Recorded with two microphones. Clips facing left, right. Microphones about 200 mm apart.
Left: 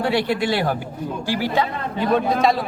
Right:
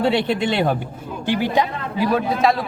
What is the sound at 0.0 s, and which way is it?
Speech, 20° right (ahead or behind).